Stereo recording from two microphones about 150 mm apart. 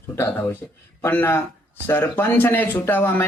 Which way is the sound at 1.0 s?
15° left (ahead or behind).